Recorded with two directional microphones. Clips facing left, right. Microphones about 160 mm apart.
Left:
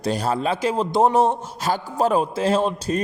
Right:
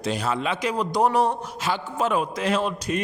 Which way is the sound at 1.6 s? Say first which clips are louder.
Left 4 dB; 40° left (ahead or behind).